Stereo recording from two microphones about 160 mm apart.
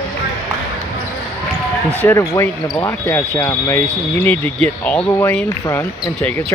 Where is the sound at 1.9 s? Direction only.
15° left (ahead or behind).